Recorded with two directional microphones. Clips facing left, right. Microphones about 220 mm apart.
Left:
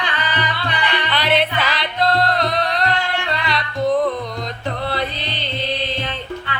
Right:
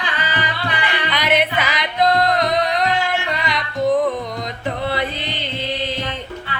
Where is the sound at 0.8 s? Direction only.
15° right (ahead or behind).